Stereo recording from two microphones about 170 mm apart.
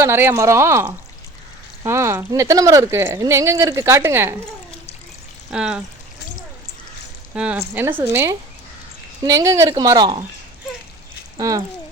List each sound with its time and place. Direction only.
0.0 s speech: 15° right (ahead or behind)
5.5 s speech: 5° right (ahead or behind)
7.3 s speech: 10° right (ahead or behind); by 10.2 s 25° right (ahead or behind)
11.3 s speech: 20° right (ahead or behind)